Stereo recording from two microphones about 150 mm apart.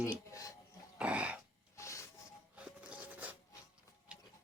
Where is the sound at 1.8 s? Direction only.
20° left (ahead or behind).